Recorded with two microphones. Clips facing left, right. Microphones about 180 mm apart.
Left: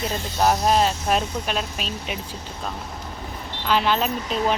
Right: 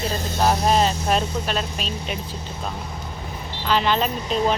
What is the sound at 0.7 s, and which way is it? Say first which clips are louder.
Speech: even; 5° left (ahead or behind).